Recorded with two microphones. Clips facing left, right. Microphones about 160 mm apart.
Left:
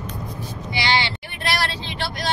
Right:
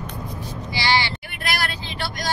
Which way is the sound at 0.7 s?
20° left (ahead or behind).